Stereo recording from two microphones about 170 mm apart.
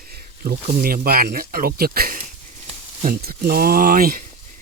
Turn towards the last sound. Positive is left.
turn(degrees=-60)  # may be behind; listen again after turning